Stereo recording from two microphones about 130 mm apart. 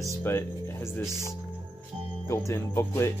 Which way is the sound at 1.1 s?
30° right (ahead or behind).